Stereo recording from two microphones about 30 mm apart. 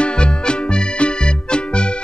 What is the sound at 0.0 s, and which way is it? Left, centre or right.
Music, left.